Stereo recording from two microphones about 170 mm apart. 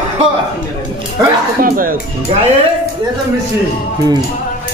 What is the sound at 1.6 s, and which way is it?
Speech, 55° right (ahead or behind).